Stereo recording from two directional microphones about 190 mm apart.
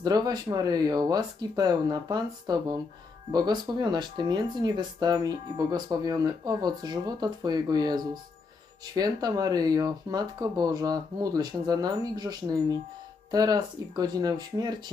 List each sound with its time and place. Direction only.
0.0 s speech: 20° right (ahead or behind)